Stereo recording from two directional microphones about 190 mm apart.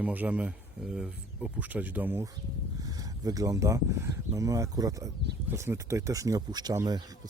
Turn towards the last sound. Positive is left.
turn(degrees=-20)  # may be behind; listen again after turning